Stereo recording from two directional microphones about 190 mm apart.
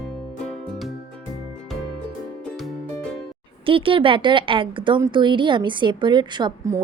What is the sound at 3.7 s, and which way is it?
A woman's voice, 30° right (ahead or behind).